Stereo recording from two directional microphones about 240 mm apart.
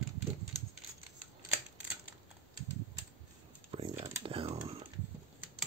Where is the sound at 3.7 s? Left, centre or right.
Right.